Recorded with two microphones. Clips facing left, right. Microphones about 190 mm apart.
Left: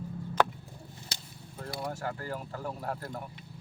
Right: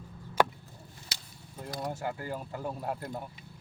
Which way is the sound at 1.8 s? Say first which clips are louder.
Right 1 dB; 15° right (ahead or behind).